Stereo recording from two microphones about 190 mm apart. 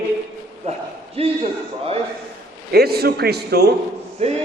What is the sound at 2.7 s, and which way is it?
A man's voice, 55° right (ahead or behind).